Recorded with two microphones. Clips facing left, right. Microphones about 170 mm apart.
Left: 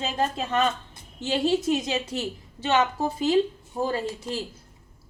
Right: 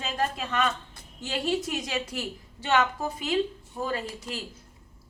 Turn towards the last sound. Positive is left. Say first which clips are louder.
# left 4 dB
turn(degrees=25)  # may be behind; listen again after turning